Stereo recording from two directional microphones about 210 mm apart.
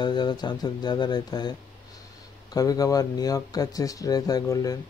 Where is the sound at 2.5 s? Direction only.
15° left (ahead or behind).